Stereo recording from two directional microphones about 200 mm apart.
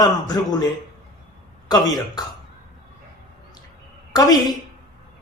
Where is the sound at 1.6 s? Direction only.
20° left (ahead or behind).